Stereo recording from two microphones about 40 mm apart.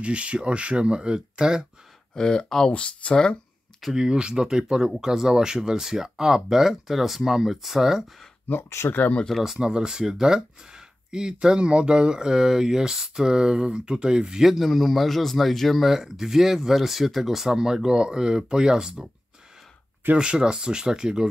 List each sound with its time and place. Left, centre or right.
0.0 s speech: right
2.1 s speech: centre
2.7 s speech: left
3.9 s speech: right
8.5 s speech: left
9.6 s speech: right
14.4 s speech: centre
15.8 s speech: centre
20.2 s speech: centre